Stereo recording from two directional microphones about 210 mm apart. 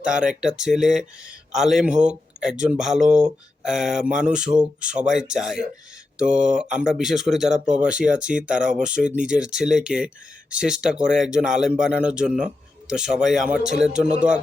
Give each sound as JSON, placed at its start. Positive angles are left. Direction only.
{"t": 0.0, "sound": "speech", "side_deg": -5}
{"t": 7.5, "sound": "speech", "side_deg": -35}
{"t": 7.8, "sound": "speech", "side_deg": -5}